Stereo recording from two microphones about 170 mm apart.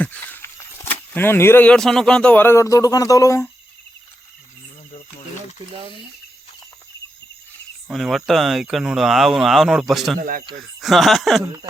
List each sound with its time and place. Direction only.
0.0 s speech: 10° left (ahead or behind)
7.9 s speech: centre (ahead or behind)
10.2 s speech: 55° right (ahead or behind)
10.8 s speech: centre (ahead or behind)